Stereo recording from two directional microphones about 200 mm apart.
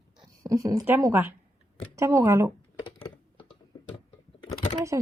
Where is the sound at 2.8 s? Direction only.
25° left (ahead or behind).